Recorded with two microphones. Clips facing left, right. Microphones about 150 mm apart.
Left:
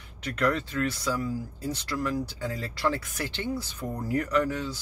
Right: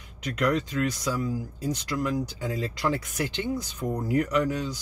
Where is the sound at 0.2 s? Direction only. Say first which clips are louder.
Right 1 dB; 15° right (ahead or behind).